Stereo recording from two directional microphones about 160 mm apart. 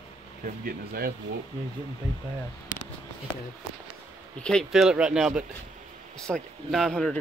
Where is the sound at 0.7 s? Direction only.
70° right (ahead or behind).